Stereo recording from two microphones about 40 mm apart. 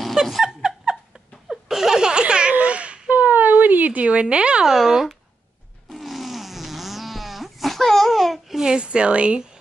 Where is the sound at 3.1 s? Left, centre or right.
Right.